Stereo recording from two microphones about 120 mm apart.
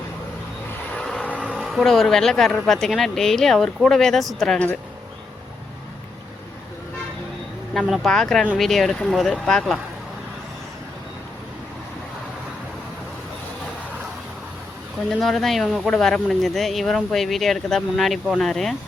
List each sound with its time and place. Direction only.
0.9 s vehicle: 5° left (ahead or behind)
1.5 s speech: centre (ahead or behind)
7.7 s speech: centre (ahead or behind)
15.1 s speech: centre (ahead or behind)